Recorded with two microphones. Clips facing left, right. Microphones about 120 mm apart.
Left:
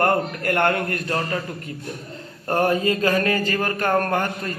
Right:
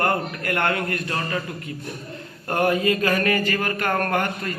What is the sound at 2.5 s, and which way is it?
Speech, 35° left (ahead or behind).